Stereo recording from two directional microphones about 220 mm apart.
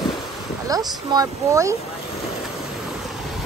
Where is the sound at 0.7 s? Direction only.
15° right (ahead or behind).